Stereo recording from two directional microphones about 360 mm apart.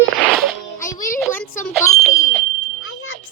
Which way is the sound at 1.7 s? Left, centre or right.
Centre.